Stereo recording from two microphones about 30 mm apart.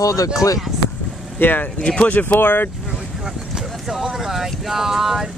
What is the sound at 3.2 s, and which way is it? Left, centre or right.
Speech, centre.